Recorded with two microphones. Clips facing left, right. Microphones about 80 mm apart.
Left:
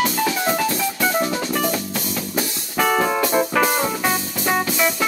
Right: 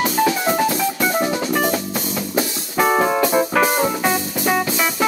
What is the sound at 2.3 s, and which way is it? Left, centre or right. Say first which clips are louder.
Music: right 3 dB; centre.